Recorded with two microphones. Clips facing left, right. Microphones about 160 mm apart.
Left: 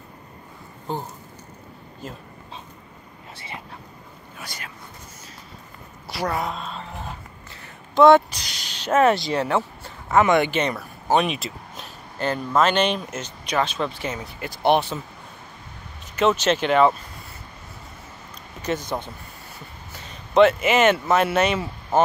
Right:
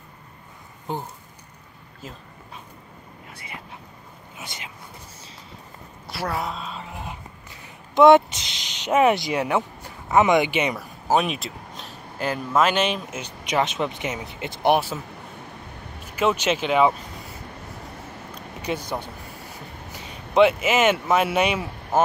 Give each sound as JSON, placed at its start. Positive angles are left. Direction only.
{"t": 3.3, "sound": "a sound", "side_deg": 30}
{"t": 4.4, "sound": "speech", "side_deg": -20}
{"t": 6.0, "sound": "a sound", "side_deg": 0}
{"t": 7.6, "sound": "speech", "side_deg": -20}
{"t": 13.5, "sound": "speech", "side_deg": -20}
{"t": 14.7, "sound": "speech", "side_deg": -5}
{"t": 16.2, "sound": "speech", "side_deg": -10}
{"t": 18.7, "sound": "speech", "side_deg": -10}
{"t": 19.9, "sound": "speech", "side_deg": -10}